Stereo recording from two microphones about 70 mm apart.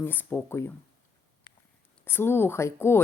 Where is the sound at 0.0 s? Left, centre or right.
Left.